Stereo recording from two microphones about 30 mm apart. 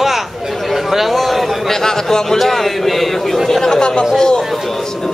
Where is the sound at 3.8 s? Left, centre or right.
Left.